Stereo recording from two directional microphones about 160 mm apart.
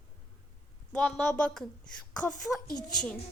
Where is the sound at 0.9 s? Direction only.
5° left (ahead or behind).